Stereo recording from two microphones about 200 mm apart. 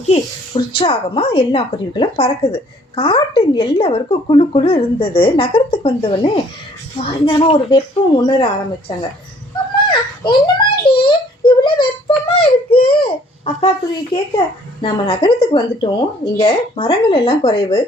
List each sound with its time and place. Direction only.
0.1 s speech: 30° left (ahead or behind)
9.9 s a sound: 25° left (ahead or behind)
14.3 s speech: 25° left (ahead or behind)